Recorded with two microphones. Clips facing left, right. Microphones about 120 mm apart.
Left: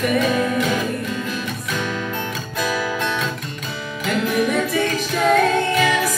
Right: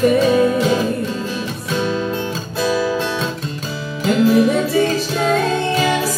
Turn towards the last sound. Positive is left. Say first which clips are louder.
# right 1 dB
turn(degrees=-30)  # may be behind; listen again after turning